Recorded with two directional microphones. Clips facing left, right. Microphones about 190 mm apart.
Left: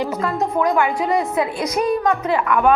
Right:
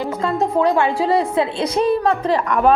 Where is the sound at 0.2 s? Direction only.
25° right (ahead or behind).